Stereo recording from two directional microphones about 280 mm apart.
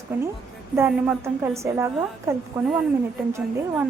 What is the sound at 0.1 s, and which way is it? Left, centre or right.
A woman's voice, centre.